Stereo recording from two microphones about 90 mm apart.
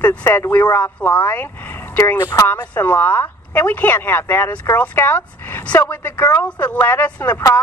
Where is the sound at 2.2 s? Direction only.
40° left (ahead or behind).